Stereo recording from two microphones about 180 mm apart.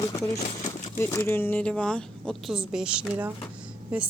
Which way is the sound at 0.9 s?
10° left (ahead or behind).